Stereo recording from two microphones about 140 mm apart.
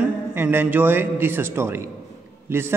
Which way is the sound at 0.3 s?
15° right (ahead or behind).